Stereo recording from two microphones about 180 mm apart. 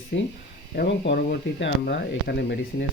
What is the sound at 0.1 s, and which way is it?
Speech, 70° left (ahead or behind).